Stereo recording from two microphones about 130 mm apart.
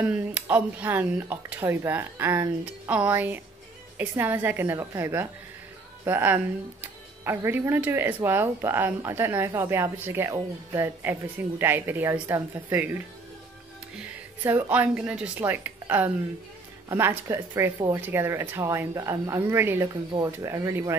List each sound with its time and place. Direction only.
0.0 s a woman's voice: 10° right (ahead or behind)
19.9 s speech: 35° right (ahead or behind)
20.2 s speech: 20° right (ahead or behind)